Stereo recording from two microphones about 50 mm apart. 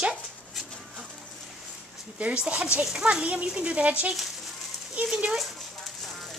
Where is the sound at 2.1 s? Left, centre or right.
Right.